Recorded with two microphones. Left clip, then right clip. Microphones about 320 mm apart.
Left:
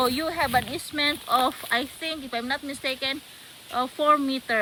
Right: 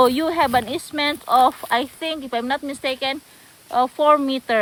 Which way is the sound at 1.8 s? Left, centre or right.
Right.